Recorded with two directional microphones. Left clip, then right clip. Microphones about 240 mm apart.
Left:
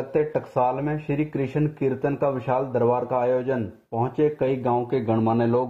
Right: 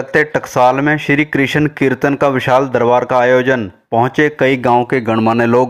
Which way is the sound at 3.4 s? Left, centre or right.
Right.